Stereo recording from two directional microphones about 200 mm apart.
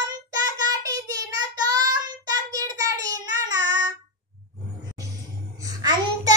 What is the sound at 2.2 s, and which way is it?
Child singing, 15° right (ahead or behind).